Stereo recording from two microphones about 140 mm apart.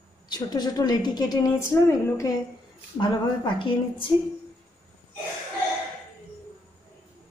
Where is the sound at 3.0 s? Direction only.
35° left (ahead or behind).